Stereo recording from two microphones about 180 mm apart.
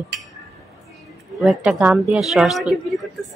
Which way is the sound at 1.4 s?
Centre (ahead or behind).